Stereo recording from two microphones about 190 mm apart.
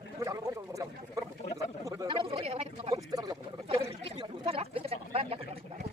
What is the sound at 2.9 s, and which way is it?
Speech, 20° right (ahead or behind).